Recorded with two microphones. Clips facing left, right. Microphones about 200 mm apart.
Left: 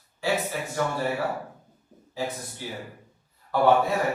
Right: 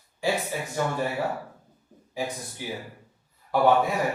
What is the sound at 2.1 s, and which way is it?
Speech, 15° right (ahead or behind).